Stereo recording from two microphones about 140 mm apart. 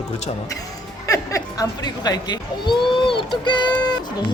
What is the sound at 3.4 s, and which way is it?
Music, 35° left (ahead or behind).